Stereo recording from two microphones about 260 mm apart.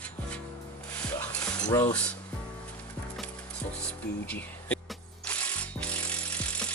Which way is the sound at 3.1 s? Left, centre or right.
Centre.